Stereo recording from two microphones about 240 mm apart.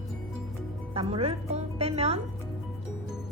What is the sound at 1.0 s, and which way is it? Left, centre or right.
A woman's voice, right.